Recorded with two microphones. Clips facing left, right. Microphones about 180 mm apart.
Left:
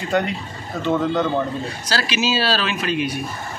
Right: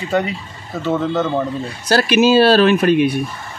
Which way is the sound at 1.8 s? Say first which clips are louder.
Right 10 dB; 55° right (ahead or behind).